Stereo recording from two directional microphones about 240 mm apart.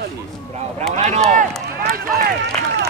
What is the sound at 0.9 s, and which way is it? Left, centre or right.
Speech, right.